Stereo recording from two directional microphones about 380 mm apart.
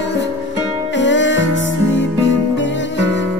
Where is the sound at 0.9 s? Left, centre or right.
Left.